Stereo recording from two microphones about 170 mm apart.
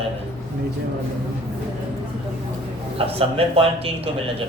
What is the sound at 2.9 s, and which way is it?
Speech, 35° right (ahead or behind).